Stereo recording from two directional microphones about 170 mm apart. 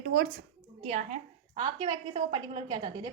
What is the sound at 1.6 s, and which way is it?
A woman's voice, 25° right (ahead or behind).